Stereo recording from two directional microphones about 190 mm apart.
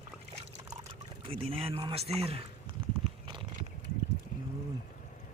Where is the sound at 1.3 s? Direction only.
30° right (ahead or behind).